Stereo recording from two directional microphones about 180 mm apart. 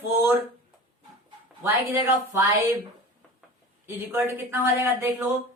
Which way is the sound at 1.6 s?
15° right (ahead or behind).